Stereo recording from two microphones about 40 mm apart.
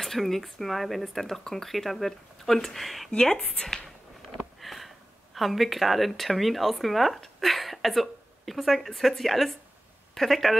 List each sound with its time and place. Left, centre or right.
0.0 s speech: centre
3.2 s a woman's voice: centre